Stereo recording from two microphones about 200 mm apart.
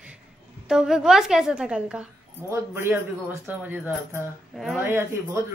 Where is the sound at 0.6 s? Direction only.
5° right (ahead or behind).